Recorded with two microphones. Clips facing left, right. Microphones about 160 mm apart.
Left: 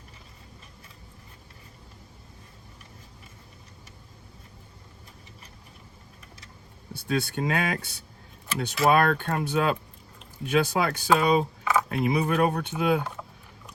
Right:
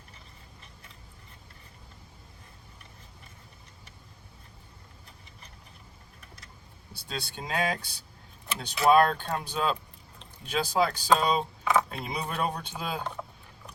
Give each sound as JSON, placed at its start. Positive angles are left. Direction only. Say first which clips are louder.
{"t": 6.9, "sound": "speech", "louder": "left 10 dB", "side_deg": 55}